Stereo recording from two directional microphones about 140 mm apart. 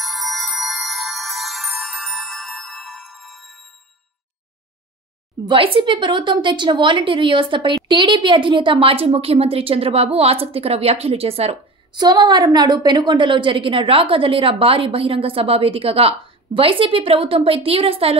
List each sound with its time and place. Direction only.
0.0 s music: centre (ahead or behind)
5.4 s a woman's voice: 40° right (ahead or behind)
11.9 s a woman's voice: 30° right (ahead or behind)